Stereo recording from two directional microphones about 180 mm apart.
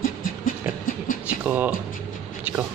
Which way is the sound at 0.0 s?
50° left (ahead or behind).